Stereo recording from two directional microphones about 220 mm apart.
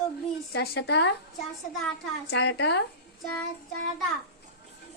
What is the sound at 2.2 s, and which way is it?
Speech, 55° left (ahead or behind).